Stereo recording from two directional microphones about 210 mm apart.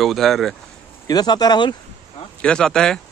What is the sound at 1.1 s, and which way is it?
Speech, 20° left (ahead or behind).